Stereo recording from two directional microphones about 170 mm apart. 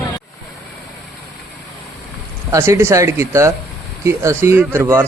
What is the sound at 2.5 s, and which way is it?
Speech, 15° right (ahead or behind).